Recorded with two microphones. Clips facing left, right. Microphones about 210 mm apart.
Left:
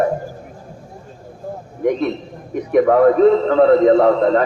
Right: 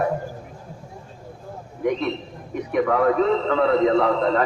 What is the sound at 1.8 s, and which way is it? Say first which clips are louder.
A man's voice: left 5 dB; 45° left (ahead or behind).